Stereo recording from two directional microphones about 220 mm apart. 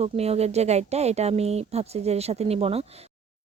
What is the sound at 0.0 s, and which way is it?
Speech, 30° right (ahead or behind).